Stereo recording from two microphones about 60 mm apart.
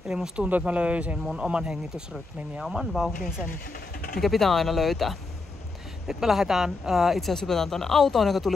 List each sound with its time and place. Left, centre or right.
0.1 s speech: centre
1.2 s speech: centre
4.2 s speech: centre